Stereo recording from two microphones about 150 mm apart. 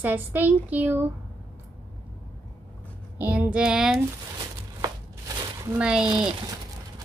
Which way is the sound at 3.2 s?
10° right (ahead or behind).